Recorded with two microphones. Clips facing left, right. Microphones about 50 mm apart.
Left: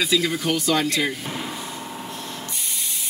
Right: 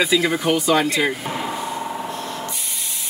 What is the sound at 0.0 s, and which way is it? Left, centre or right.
Speech, right.